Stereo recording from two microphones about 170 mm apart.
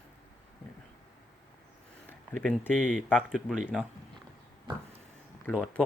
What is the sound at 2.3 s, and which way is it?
Speech, 5° left (ahead or behind).